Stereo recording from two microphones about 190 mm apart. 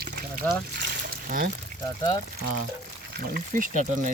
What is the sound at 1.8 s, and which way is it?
Speech, 20° left (ahead or behind).